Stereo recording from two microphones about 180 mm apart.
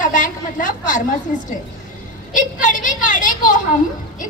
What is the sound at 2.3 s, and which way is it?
A woman's voice, 45° left (ahead or behind).